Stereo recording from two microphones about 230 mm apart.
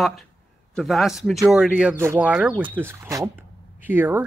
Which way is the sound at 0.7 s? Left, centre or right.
Centre.